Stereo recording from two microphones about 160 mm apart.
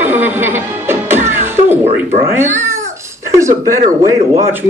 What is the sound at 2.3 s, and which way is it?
Cat, 15° right (ahead or behind).